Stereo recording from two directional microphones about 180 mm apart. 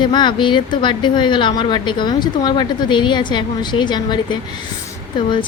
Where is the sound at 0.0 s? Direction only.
25° left (ahead or behind).